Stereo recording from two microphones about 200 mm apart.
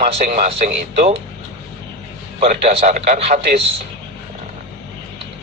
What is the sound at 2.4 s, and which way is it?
Speech, 35° right (ahead or behind).